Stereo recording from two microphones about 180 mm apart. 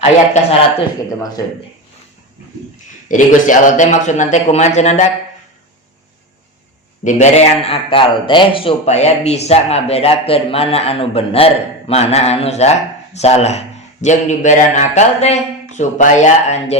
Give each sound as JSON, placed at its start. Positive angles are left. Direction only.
{"t": 3.1, "sound": "a man's voice", "side_deg": 45}
{"t": 7.0, "sound": "a man's voice", "side_deg": 40}